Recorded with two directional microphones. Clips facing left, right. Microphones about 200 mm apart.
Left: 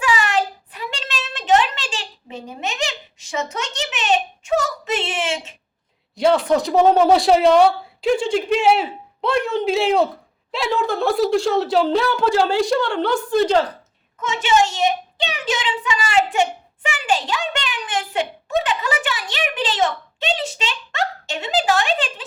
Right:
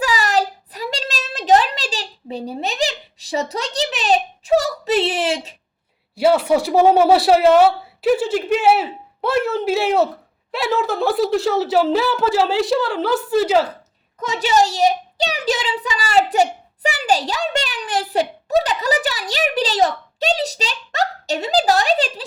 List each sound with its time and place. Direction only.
0.0 s a sound: 40° right (ahead or behind)
6.1 s speech: 5° right (ahead or behind)
14.2 s speech: 35° right (ahead or behind)